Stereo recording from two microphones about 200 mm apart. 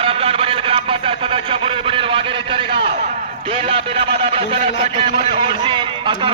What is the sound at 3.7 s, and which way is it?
Speech, 25° right (ahead or behind).